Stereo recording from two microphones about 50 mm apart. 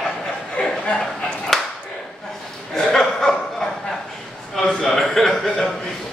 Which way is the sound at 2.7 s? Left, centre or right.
Centre.